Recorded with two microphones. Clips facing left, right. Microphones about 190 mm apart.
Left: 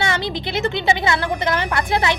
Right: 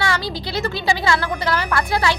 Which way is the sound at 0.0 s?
20° left (ahead or behind).